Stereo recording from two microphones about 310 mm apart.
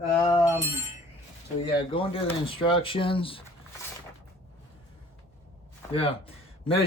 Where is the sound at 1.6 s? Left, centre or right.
Centre.